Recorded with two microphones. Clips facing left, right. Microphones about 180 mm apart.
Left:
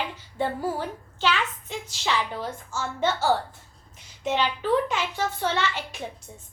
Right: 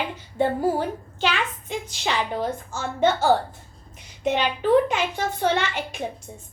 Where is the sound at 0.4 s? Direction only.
55° right (ahead or behind).